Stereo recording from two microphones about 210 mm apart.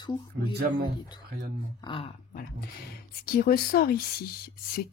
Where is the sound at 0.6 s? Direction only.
45° right (ahead or behind).